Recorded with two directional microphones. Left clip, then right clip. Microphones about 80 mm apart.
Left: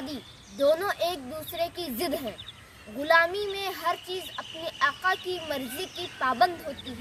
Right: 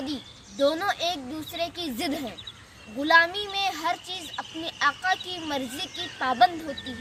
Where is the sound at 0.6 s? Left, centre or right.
Left.